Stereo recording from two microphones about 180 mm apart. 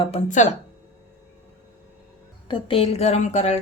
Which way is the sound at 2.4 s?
30° left (ahead or behind).